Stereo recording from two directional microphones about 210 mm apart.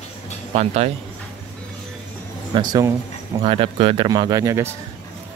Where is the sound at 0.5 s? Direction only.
30° right (ahead or behind).